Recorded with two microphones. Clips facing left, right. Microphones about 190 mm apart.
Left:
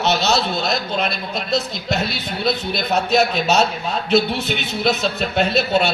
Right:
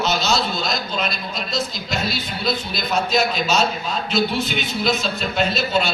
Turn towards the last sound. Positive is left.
turn(degrees=60)  # may be behind; listen again after turning